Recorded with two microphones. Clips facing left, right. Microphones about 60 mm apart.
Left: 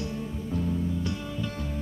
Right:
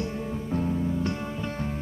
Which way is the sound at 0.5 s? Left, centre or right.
Right.